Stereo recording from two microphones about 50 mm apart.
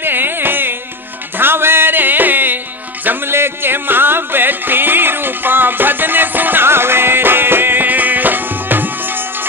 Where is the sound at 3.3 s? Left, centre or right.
Right.